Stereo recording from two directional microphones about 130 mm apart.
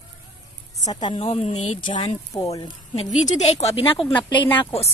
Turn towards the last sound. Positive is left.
turn(degrees=50)  # may be behind; listen again after turning